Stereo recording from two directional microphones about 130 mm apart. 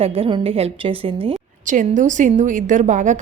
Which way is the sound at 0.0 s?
45° right (ahead or behind).